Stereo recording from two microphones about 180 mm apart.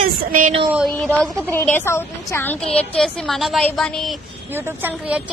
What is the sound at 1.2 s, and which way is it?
A woman's voice, 5° left (ahead or behind).